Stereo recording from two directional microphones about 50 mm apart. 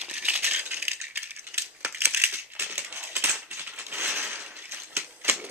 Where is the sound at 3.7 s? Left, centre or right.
Right.